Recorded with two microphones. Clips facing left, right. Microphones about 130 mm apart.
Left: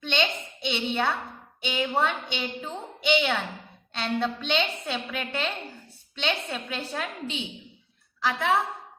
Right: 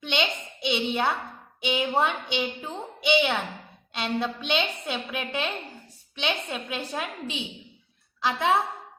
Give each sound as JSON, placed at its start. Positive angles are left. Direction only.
{"t": 0.0, "sound": "a woman's voice", "side_deg": -10}